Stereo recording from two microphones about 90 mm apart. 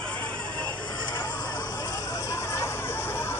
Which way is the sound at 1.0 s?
55° left (ahead or behind).